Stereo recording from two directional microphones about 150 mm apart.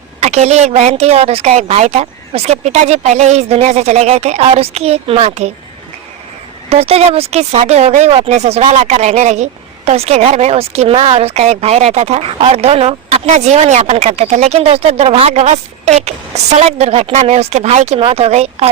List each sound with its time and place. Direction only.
0.2 s speech: 45° right (ahead or behind)
6.7 s speech: 40° right (ahead or behind)